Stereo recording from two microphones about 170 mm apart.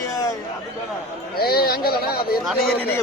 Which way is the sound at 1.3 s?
65° left (ahead or behind).